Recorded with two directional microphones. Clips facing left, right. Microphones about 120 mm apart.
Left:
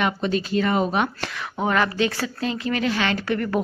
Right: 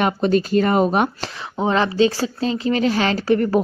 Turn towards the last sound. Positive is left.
turn(degrees=-30)  # may be behind; listen again after turning